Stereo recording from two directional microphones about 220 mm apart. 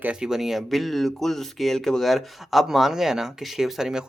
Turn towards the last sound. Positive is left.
turn(degrees=-5)  # may be behind; listen again after turning